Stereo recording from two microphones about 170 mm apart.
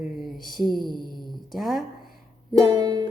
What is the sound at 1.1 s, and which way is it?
Speech, centre (ahead or behind).